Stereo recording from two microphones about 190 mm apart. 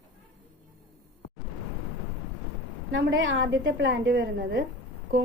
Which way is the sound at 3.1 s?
75° right (ahead or behind).